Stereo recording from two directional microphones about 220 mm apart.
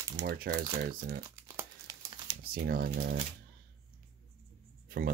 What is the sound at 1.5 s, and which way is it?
Crumpling, 10° right (ahead or behind).